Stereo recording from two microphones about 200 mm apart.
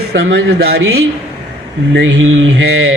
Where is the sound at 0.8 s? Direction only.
90° right.